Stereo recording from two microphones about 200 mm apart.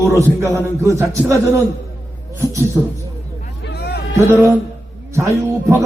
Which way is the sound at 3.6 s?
50° left (ahead or behind).